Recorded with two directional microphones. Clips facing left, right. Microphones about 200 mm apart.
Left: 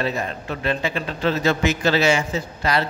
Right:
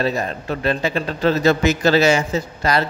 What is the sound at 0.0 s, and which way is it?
A man's voice, 40° right (ahead or behind).